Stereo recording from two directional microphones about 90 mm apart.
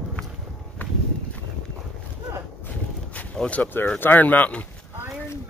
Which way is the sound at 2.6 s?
15° left (ahead or behind).